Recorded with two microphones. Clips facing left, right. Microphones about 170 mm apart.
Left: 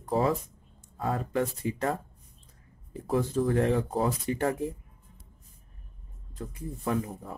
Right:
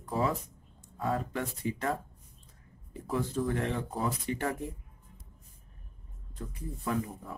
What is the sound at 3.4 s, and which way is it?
Speech, 40° left (ahead or behind).